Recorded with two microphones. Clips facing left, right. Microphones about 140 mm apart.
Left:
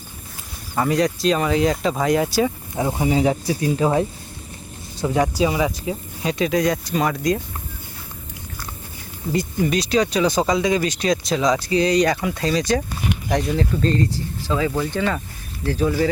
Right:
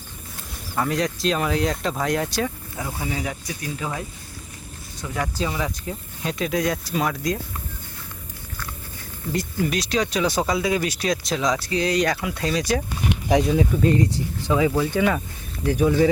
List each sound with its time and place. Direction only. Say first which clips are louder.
0.8 s speech: left 4 dB; centre (ahead or behind)
2.7 s speech: left 12 dB; 25° left (ahead or behind)
5.4 s speech: left 7 dB; 10° left (ahead or behind)
9.6 s speech: left 5 dB; centre (ahead or behind); by 14.7 s 20° right (ahead or behind)
14.7 s speech: right 1 dB; 5° right (ahead or behind)